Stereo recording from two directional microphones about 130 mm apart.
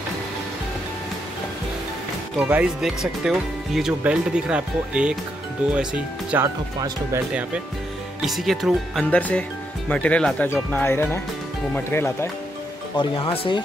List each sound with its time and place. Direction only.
2.3 s speech: 10° right (ahead or behind)
6.4 s speech: 30° right (ahead or behind)
8.2 s speech: centre (ahead or behind); by 12.3 s 15° left (ahead or behind)
12.9 s speech: 35° left (ahead or behind)